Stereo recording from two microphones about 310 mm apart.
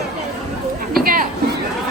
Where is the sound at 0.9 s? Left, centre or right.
Right.